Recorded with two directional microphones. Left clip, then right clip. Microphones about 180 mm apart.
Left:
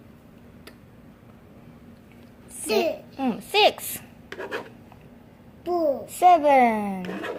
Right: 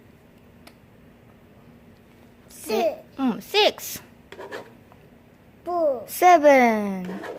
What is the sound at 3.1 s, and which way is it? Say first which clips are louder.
Babbling: left 1 dB; 40° right (ahead or behind).